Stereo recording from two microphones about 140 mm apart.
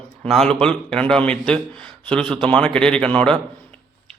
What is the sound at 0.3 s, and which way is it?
A man's voice, 5° left (ahead or behind).